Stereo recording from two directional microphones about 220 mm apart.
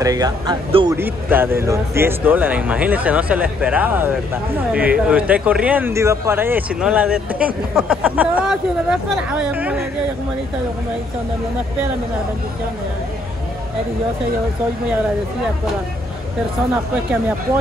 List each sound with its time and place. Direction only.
0.0 s speech: 15° right (ahead or behind)
0.9 s speech: 10° right (ahead or behind)